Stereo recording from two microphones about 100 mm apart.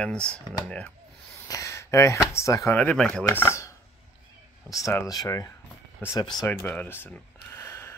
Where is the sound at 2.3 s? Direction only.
30° left (ahead or behind).